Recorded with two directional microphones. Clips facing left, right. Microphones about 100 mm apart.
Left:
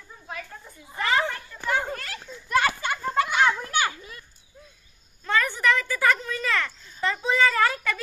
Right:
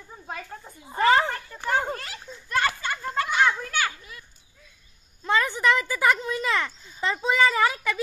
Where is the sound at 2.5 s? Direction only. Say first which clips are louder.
Left 2 dB; 10° left (ahead or behind).